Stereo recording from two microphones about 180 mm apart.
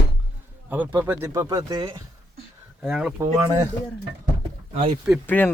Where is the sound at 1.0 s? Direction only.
10° right (ahead or behind).